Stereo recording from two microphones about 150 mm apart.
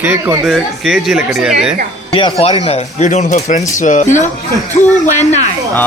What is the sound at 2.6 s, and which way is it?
Speech, 50° left (ahead or behind).